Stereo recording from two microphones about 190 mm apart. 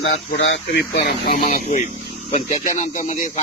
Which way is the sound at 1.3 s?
40° left (ahead or behind).